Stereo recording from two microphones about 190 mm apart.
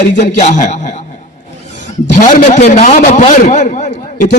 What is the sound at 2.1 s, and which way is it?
A man's voice, 40° left (ahead or behind).